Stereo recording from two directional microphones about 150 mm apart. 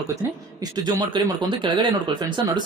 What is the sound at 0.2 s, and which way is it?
Speech, 25° right (ahead or behind).